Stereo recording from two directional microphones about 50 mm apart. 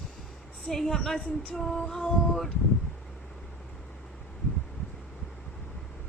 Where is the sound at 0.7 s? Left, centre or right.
Centre.